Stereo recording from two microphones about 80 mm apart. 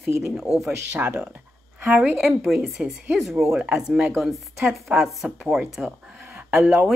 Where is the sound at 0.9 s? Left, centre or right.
Centre.